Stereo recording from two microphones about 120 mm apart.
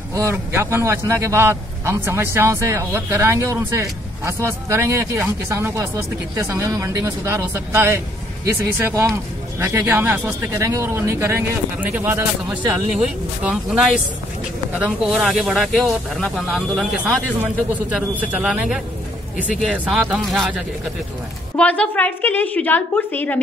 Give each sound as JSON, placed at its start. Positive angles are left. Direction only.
{"t": 0.1, "sound": "a man's voice", "side_deg": -25}
{"t": 12.9, "sound": "speech", "side_deg": -5}
{"t": 21.5, "sound": "a woman's voice", "side_deg": 10}